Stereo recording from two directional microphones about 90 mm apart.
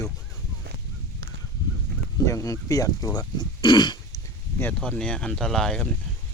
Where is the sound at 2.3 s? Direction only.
40° left (ahead or behind).